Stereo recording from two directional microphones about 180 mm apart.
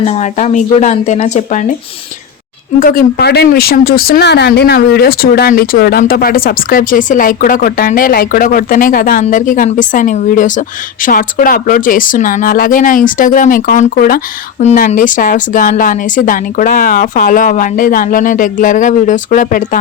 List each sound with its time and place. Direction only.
0.0 s speech: 40° left (ahead or behind)
3.2 s a woman's voice: 65° left (ahead or behind)
14.6 s a woman's voice: 40° left (ahead or behind)